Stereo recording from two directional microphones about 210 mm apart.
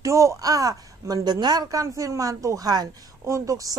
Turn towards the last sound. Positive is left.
turn(degrees=-15)  # may be behind; listen again after turning